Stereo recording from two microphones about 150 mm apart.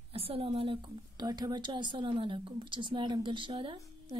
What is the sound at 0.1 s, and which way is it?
A woman's voice, 40° right (ahead or behind).